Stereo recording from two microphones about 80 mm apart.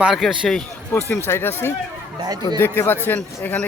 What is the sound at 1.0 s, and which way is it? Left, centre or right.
A man's voice, left.